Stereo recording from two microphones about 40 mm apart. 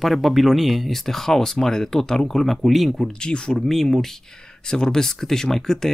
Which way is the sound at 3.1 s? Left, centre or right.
Left.